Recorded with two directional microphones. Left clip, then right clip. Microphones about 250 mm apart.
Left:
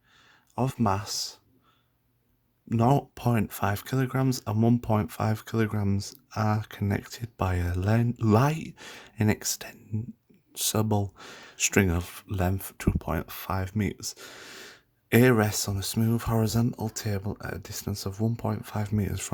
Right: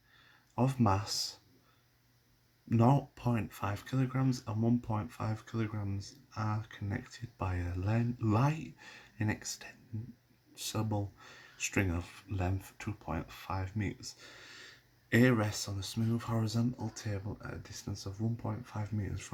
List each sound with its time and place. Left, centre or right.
0.5 s speech: left
2.6 s speech: left